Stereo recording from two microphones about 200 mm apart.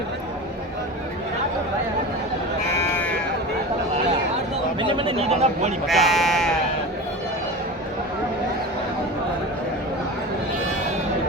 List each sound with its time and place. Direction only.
2.7 s sheep: 10° left (ahead or behind)
4.8 s speech: 25° right (ahead or behind)
5.9 s speech: centre (ahead or behind)